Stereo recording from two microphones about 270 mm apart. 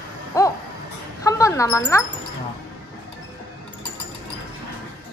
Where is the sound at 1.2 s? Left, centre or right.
Centre.